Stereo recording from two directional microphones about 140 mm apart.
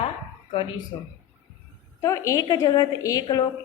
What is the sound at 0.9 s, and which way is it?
Speech, 35° left (ahead or behind).